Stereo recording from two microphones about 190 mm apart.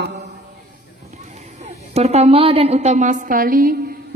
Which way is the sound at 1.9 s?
35° right (ahead or behind).